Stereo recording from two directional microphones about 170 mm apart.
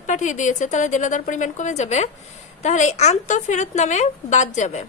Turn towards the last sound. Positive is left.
turn(degrees=45)  # may be behind; listen again after turning